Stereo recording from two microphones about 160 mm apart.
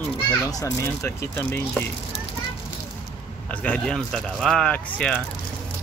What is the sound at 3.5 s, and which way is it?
Speech, 10° left (ahead or behind).